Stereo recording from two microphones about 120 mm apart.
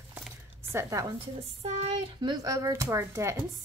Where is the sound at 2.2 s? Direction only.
30° right (ahead or behind).